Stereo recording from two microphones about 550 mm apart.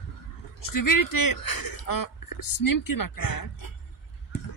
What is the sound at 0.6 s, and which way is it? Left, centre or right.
Speech, left.